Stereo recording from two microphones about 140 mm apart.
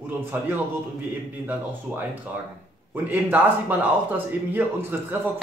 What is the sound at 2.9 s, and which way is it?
Speech, 15° right (ahead or behind).